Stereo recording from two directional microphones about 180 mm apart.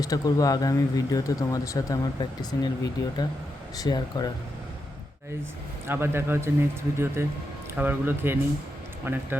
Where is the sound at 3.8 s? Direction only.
20° left (ahead or behind).